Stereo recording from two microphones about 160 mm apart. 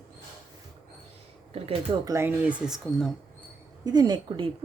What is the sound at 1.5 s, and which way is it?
Speech, 35° right (ahead or behind).